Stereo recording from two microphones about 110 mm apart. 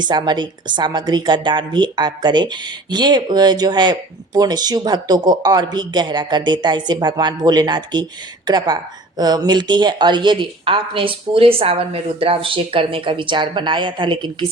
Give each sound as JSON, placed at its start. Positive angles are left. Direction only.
{"t": 0.0, "sound": "a woman's voice", "side_deg": -45}